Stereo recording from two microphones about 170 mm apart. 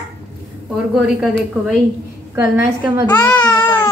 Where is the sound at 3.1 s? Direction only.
10° left (ahead or behind).